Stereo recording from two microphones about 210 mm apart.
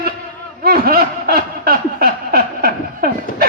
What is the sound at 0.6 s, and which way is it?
Snicker, 45° right (ahead or behind).